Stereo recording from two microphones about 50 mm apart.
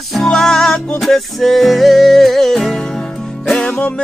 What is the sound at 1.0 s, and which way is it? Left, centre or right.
Music, centre.